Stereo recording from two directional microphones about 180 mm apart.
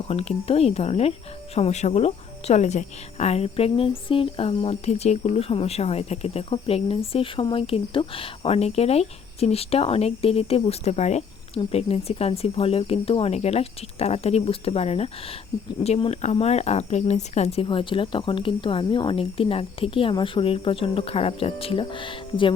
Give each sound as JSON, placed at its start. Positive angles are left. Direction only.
{"t": 0.1, "sound": "speech", "side_deg": 35}